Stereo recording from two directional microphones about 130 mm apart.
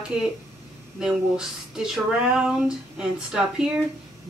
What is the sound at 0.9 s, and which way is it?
Speech, 5° right (ahead or behind).